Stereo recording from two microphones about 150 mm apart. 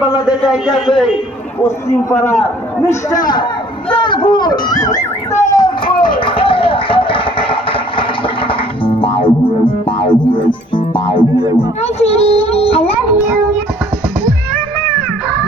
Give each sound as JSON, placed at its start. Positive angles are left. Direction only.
{"t": 0.3, "sound": "a man's voice", "side_deg": -5}
{"t": 0.9, "sound": "a man's voice", "side_deg": 35}
{"t": 1.6, "sound": "a man's voice", "side_deg": 20}
{"t": 3.9, "sound": "a sound", "side_deg": 35}
{"t": 8.4, "sound": "music", "side_deg": 35}
{"t": 11.8, "sound": "child singing", "side_deg": 45}